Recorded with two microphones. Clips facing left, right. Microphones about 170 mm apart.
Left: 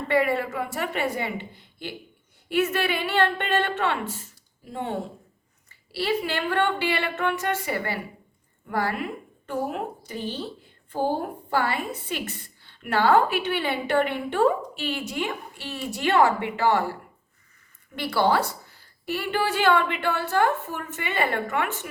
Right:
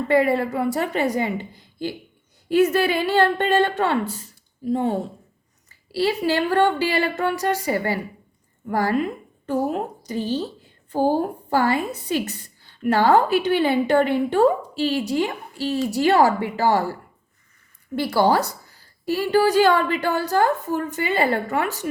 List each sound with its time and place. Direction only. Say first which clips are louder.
0.1 s a woman's voice: right 4 dB; 35° right (ahead or behind)
6.0 s a woman's voice: right 5 dB; 40° right (ahead or behind)
11.5 s a woman's voice: right 5 dB; 40° right (ahead or behind)
17.9 s a woman's voice: right 4 dB; 40° right (ahead or behind)